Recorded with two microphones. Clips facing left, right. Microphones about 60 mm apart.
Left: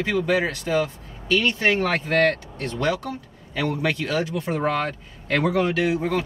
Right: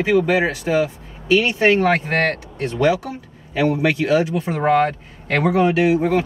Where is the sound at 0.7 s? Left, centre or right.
Right.